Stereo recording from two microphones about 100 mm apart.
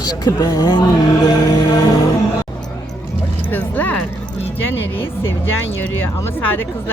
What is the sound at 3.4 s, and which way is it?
Speech, 20° left (ahead or behind).